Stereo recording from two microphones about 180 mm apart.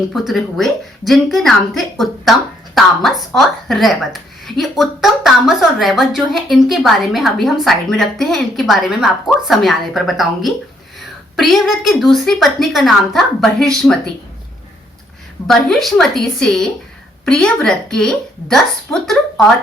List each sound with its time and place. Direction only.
0.1 s a woman's voice: centre (ahead or behind)
2.7 s a woman's voice: centre (ahead or behind)
15.4 s a woman's voice: centre (ahead or behind)